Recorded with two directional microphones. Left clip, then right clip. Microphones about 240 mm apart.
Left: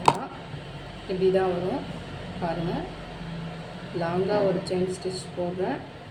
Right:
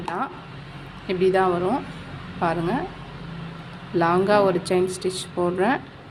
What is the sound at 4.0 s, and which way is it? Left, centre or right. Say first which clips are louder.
Speech: right 7 dB; right.